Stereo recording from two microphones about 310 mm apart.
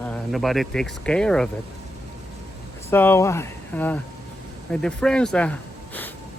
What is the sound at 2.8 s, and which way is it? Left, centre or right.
Speech, centre.